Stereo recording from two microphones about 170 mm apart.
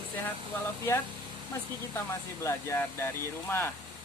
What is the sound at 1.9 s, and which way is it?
Speech, 15° left (ahead or behind).